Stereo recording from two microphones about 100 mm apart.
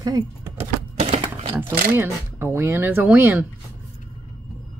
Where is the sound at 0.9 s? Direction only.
70° right (ahead or behind).